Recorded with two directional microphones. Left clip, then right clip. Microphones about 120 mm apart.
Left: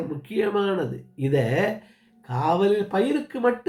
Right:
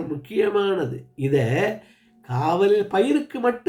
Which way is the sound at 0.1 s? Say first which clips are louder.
Right 4 dB; 15° right (ahead or behind).